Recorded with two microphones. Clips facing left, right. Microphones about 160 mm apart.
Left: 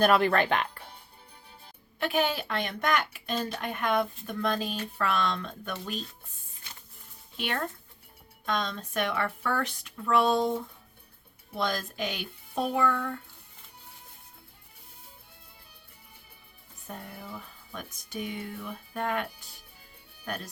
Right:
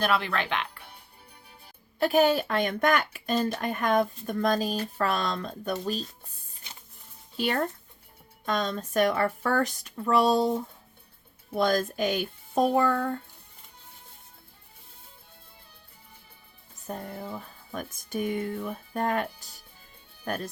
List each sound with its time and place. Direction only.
0.0 s speech: 50° left (ahead or behind)
2.0 s speech: 40° right (ahead or behind)
7.3 s speech: 35° right (ahead or behind)
11.5 s a child's voice: 45° right (ahead or behind)
16.8 s a child's voice: 40° right (ahead or behind)